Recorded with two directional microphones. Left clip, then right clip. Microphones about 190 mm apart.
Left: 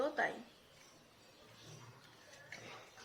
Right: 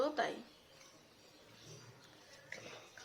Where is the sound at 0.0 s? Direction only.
15° right (ahead or behind).